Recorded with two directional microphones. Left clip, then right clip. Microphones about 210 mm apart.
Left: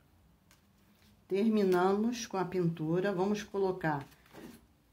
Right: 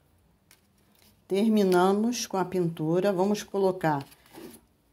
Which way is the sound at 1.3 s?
25° right (ahead or behind).